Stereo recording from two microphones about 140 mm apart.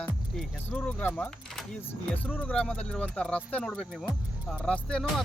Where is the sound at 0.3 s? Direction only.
10° left (ahead or behind).